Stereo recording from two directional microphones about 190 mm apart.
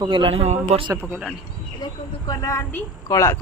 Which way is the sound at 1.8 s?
20° left (ahead or behind).